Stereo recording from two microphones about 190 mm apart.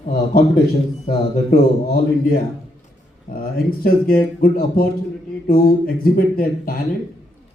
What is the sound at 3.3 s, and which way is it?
Speech, 50° left (ahead or behind).